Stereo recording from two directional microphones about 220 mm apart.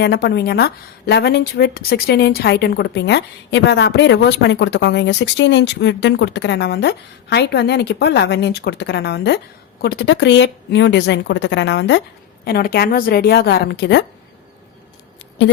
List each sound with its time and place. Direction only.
0.0 s a woman's voice: 45° left (ahead or behind)